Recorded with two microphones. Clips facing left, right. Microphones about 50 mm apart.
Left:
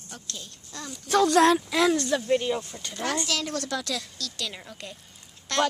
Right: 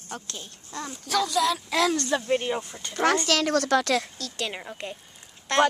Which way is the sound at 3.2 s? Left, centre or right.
Right.